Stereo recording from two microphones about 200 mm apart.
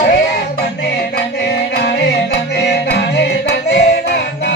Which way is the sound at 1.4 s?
55° left (ahead or behind).